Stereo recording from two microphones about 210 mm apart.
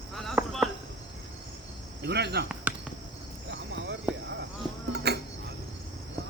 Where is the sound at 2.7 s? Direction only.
5° right (ahead or behind).